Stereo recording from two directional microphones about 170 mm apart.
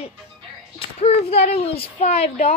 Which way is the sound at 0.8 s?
35° left (ahead or behind).